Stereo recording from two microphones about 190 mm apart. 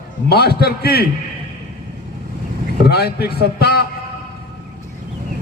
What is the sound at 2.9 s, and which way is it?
Speech, 55° left (ahead or behind).